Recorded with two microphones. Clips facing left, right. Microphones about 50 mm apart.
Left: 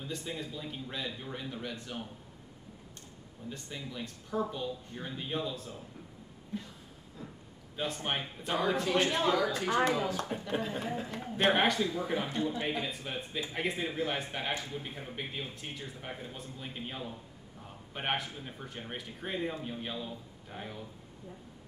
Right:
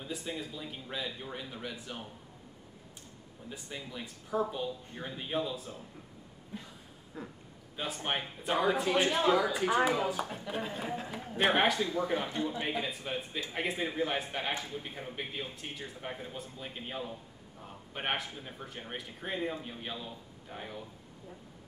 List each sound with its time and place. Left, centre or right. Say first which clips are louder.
0.0 s speech: even; centre
3.4 s speech: left 1 dB; centre
7.2 s a man's voice: right 3 dB; right
7.7 s speech: even; centre
15.6 s speech: right 1 dB; centre